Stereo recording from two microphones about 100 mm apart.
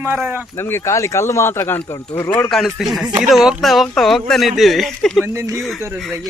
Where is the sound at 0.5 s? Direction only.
25° left (ahead or behind).